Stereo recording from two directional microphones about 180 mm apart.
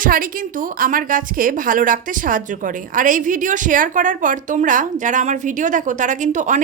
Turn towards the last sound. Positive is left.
turn(degrees=-45)  # may be behind; listen again after turning